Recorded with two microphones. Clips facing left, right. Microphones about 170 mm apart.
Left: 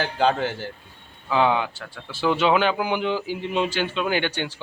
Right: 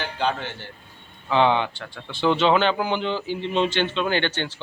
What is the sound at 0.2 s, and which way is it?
Speech, 40° left (ahead or behind).